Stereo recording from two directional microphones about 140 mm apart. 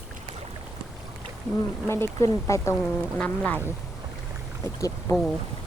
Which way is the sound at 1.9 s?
20° left (ahead or behind).